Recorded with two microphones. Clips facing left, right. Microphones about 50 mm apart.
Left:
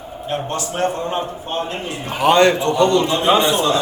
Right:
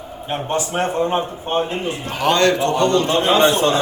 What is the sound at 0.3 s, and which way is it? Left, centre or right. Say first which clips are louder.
A man's voice: right 1 dB; right.